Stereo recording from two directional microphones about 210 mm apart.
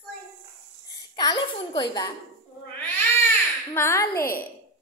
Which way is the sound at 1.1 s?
20° left (ahead or behind).